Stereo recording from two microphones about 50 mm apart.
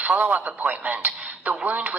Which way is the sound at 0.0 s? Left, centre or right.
Right.